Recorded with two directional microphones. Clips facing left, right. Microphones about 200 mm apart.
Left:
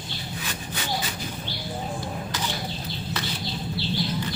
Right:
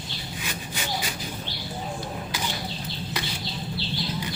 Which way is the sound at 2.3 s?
10° right (ahead or behind).